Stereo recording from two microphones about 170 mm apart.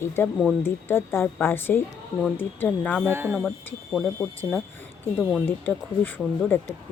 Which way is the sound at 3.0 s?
15° right (ahead or behind).